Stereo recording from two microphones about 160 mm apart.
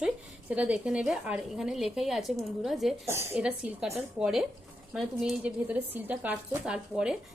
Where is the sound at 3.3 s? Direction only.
5° right (ahead or behind).